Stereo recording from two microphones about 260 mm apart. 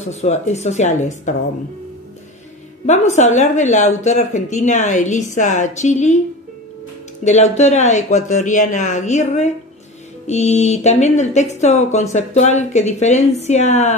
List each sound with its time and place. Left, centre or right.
0.0 s a woman's voice: left
2.9 s a woman's voice: left
7.2 s a woman's voice: left